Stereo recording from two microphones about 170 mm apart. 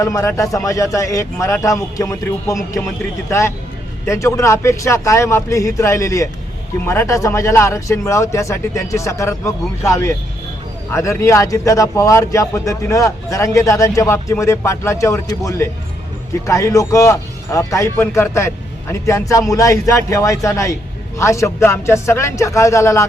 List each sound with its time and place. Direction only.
0.0 s a man's voice: 15° left (ahead or behind)